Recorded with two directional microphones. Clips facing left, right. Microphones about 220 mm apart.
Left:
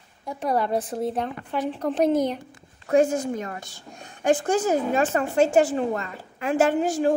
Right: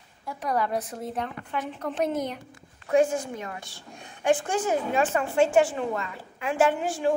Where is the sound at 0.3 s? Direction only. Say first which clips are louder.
Left 3 dB; 30° left (ahead or behind).